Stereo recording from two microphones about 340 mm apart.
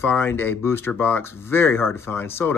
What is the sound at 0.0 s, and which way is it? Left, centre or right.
Speech, centre.